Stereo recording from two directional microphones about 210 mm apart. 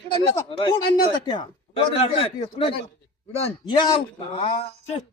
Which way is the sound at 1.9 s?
25° left (ahead or behind).